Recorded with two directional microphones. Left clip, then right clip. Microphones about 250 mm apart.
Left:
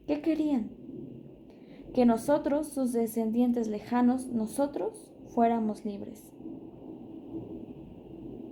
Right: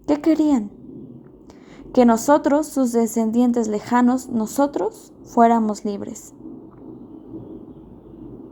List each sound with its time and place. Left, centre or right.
0.0 s a woman's voice: right
1.9 s a woman's voice: right